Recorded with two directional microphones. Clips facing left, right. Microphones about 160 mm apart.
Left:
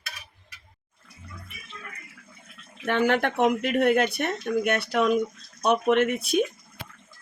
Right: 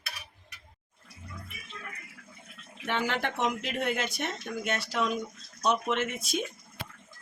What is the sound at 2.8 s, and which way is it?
Speech, 55° left (ahead or behind).